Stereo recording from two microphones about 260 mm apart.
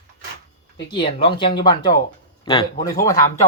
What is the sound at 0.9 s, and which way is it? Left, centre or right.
Speech, centre.